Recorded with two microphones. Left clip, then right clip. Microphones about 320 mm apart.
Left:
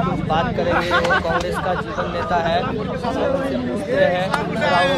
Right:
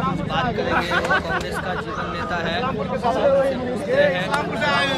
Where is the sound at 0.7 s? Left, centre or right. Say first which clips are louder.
Left 3 dB; left.